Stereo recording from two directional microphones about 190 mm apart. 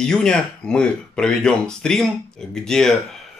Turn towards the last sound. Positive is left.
turn(degrees=5)  # may be behind; listen again after turning